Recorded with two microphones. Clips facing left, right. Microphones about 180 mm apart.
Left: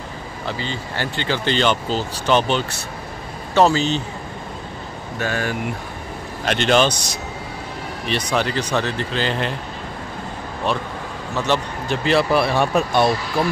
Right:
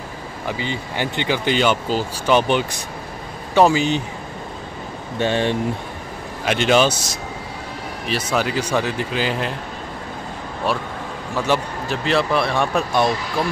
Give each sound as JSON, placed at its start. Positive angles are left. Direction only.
{"t": 0.5, "sound": "speech", "side_deg": -15}
{"t": 5.2, "sound": "speech", "side_deg": -25}
{"t": 6.4, "sound": "speech", "side_deg": -10}
{"t": 11.3, "sound": "speech", "side_deg": -10}